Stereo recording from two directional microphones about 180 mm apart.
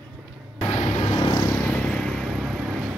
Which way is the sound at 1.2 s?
20° left (ahead or behind).